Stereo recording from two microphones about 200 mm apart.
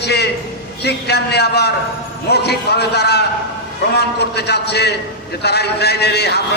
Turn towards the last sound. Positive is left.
turn(degrees=55)  # may be behind; listen again after turning